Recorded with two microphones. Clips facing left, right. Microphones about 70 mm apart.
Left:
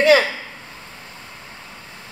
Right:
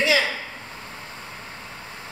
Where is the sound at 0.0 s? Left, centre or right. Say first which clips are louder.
Left 7 dB; left.